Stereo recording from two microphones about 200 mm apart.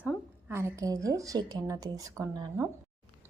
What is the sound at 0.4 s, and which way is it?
A woman's voice, 15° right (ahead or behind).